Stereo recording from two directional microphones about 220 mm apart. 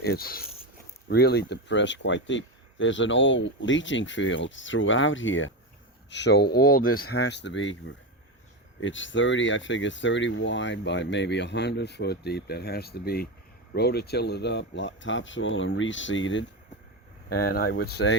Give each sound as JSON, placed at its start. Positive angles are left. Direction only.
{"t": 0.0, "sound": "speech", "side_deg": 45}
{"t": 17.2, "sound": "speech", "side_deg": 45}